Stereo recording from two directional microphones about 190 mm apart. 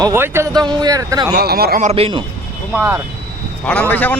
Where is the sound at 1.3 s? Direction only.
55° right (ahead or behind).